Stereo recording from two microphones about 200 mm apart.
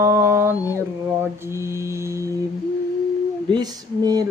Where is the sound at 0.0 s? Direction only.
15° right (ahead or behind).